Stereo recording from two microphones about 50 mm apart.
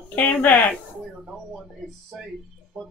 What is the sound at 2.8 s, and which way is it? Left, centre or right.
Speech, centre.